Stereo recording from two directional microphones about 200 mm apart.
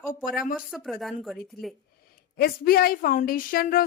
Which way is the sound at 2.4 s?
50° left (ahead or behind).